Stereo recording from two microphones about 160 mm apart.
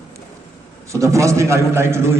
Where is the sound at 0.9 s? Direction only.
20° right (ahead or behind).